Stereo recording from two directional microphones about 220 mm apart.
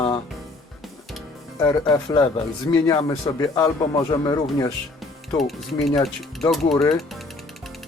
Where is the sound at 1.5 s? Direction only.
15° left (ahead or behind).